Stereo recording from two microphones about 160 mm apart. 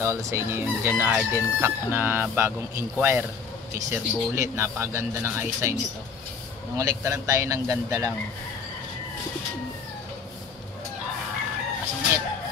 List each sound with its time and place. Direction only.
0.0 s crowing: 15° right (ahead or behind)
6.8 s a man's voice: 20° right (ahead or behind)